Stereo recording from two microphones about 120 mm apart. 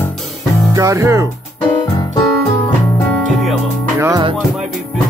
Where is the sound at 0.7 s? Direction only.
25° right (ahead or behind).